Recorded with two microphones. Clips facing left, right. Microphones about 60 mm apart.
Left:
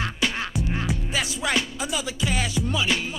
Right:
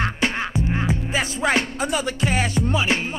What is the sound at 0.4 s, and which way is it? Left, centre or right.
Music, right.